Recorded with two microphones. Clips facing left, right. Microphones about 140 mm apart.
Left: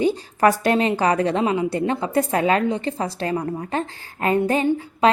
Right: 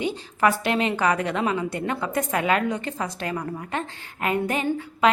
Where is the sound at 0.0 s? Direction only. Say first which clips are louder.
Left 5 dB; 40° left (ahead or behind).